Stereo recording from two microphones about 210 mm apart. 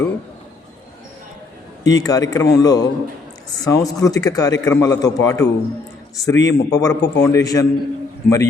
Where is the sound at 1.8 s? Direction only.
15° left (ahead or behind).